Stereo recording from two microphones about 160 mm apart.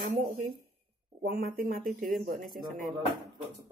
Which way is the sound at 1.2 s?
75° right (ahead or behind).